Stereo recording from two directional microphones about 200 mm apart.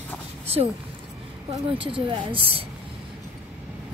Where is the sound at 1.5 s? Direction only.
25° right (ahead or behind).